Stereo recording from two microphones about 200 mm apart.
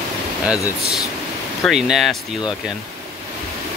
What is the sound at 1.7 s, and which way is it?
Speech, centre (ahead or behind).